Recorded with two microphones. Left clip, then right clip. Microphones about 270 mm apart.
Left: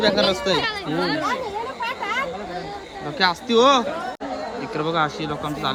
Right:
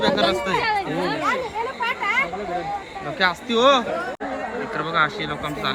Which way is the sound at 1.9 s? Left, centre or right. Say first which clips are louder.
Right 4 dB; left.